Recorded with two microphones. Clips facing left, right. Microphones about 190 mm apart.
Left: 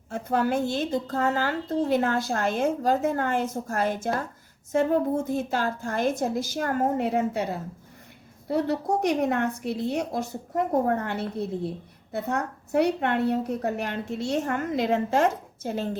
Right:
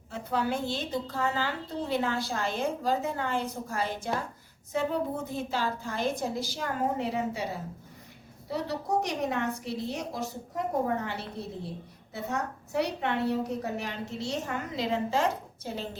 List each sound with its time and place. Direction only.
0.1 s a woman's voice: 50° left (ahead or behind)